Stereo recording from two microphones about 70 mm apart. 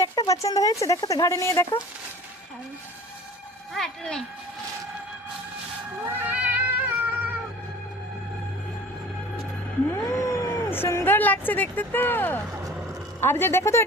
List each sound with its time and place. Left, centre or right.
0.0 s speech: left
3.8 s speech: centre
6.1 s cat: right
9.9 s a sound: left
10.7 s a sound: left
11.0 s speech: left